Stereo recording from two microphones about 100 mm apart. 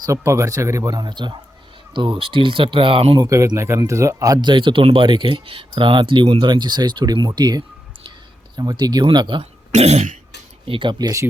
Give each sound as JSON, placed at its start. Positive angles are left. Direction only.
{"t": 0.0, "sound": "speech", "side_deg": -30}
{"t": 3.2, "sound": "speech", "side_deg": -35}
{"t": 9.4, "sound": "speech", "side_deg": -90}
{"t": 10.7, "sound": "speech", "side_deg": -55}